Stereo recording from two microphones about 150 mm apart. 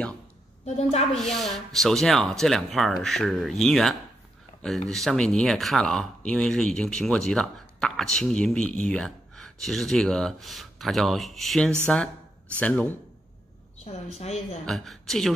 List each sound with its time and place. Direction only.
0.7 s a woman's voice: 45° left (ahead or behind)
1.1 s speech: 5° left (ahead or behind)
13.8 s a woman's voice: 45° left (ahead or behind)
14.7 s speech: centre (ahead or behind)